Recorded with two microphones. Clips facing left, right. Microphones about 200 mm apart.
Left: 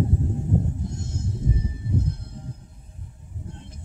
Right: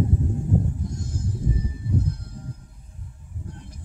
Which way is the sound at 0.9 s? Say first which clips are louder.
Right 1 dB; 25° left (ahead or behind).